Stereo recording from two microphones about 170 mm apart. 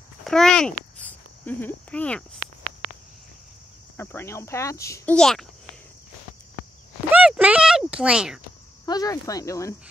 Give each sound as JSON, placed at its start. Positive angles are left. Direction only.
{"t": 0.2, "sound": "speech", "side_deg": 5}
{"t": 3.9, "sound": "speech", "side_deg": 15}
{"t": 5.1, "sound": "a child's voice", "side_deg": 5}
{"t": 7.1, "sound": "a sound", "side_deg": -5}
{"t": 8.8, "sound": "speech", "side_deg": 20}